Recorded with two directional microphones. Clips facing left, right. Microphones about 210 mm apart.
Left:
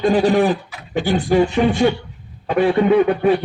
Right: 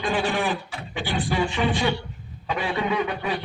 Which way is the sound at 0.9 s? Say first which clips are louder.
Left 10 dB; 45° left (ahead or behind).